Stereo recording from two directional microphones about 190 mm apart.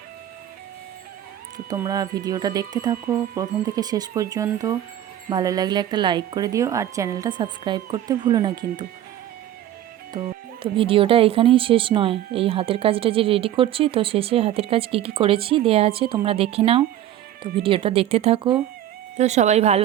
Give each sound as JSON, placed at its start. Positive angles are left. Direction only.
{"t": 1.7, "sound": "speech", "side_deg": -15}
{"t": 10.2, "sound": "speech", "side_deg": -25}